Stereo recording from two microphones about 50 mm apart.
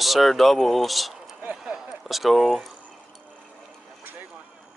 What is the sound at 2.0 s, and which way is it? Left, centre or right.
Speech, centre.